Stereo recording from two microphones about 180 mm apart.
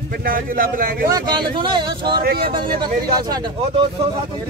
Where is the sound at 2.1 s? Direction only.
60° right (ahead or behind).